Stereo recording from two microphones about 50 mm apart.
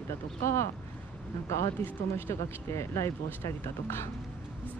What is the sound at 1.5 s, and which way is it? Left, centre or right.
Speech, left.